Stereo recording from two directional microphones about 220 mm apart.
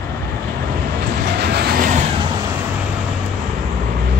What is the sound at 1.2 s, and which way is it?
Train, 50° right (ahead or behind).